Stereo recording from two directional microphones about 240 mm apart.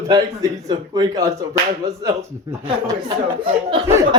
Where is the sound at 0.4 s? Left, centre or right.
Centre.